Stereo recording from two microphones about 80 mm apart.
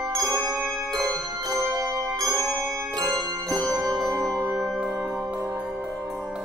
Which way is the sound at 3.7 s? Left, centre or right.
Right.